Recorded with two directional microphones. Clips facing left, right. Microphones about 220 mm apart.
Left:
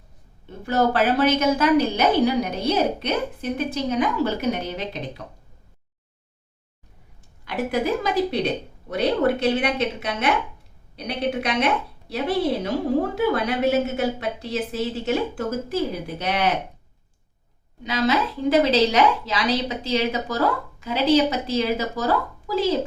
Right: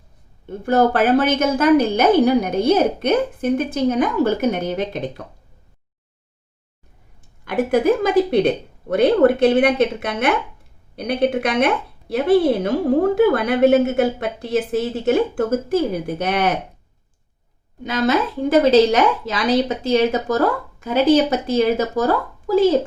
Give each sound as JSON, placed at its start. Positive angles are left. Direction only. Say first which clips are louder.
{"t": 0.6, "sound": "a woman's voice", "louder": "right 4 dB", "side_deg": -50}
{"t": 7.4, "sound": "a woman's voice", "louder": "right 7 dB", "side_deg": -50}
{"t": 17.8, "sound": "a woman's voice", "louder": "right 3 dB", "side_deg": -50}